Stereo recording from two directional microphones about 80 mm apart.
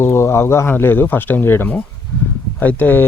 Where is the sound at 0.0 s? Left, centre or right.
Left.